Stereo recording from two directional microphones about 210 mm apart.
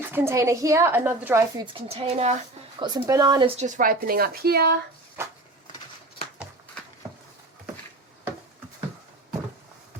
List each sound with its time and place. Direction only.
0.1 s a woman's voice: 10° right (ahead or behind)
1.6 s speech: 25° right (ahead or behind)
2.7 s speech: 20° right (ahead or behind)
3.6 s speech: 40° right (ahead or behind)
5.2 s a sound: 10° right (ahead or behind)